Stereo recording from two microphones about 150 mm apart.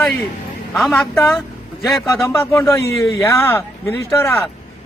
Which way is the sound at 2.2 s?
20° left (ahead or behind).